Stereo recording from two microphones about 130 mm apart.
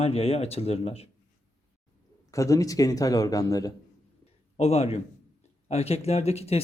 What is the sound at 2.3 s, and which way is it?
Speech, 25° left (ahead or behind).